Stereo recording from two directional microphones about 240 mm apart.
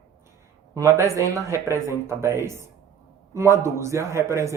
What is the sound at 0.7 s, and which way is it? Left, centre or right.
A man's voice, centre.